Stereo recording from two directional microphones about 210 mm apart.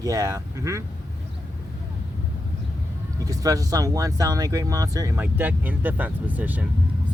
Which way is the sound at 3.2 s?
15° right (ahead or behind).